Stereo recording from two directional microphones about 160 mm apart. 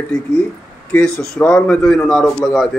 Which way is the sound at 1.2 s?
10° left (ahead or behind).